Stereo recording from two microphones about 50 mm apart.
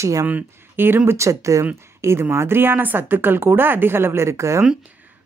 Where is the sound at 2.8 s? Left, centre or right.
Right.